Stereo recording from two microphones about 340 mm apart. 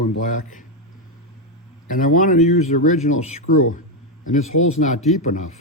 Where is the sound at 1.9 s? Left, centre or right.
Left.